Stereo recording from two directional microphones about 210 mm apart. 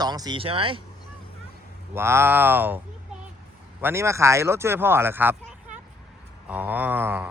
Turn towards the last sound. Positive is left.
turn(degrees=-10)  # may be behind; listen again after turning